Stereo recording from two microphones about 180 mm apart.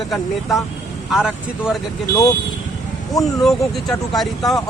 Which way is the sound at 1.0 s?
Centre (ahead or behind).